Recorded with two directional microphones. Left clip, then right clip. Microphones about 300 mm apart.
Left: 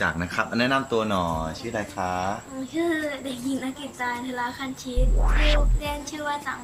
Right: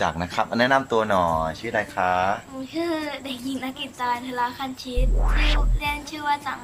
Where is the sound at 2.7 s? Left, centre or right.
Centre.